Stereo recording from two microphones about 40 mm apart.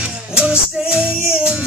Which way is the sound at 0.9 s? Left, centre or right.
Right.